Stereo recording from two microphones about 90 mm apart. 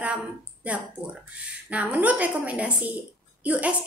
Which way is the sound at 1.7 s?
15° right (ahead or behind).